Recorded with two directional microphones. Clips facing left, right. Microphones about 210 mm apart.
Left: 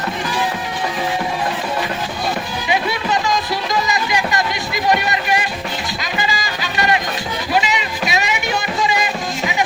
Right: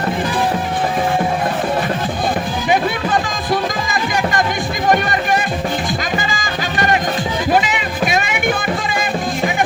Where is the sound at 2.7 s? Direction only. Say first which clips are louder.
Right 2 dB; 50° right (ahead or behind).